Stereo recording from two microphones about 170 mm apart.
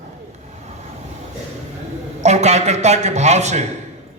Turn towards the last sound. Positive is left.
turn(degrees=-40)  # may be behind; listen again after turning